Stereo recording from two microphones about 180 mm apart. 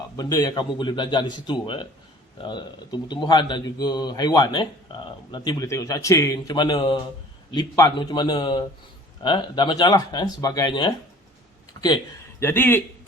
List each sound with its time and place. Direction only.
0.2 s a man's voice: 20° left (ahead or behind)
12.4 s speech: 15° left (ahead or behind)